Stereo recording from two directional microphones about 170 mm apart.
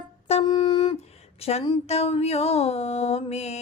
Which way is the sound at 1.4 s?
35° left (ahead or behind).